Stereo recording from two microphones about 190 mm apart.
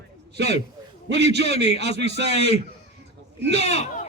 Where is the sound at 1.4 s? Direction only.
30° left (ahead or behind).